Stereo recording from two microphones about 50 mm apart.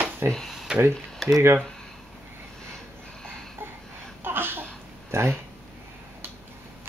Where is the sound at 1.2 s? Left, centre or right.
Centre.